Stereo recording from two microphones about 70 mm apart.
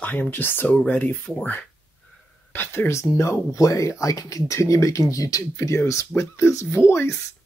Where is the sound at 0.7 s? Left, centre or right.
Centre.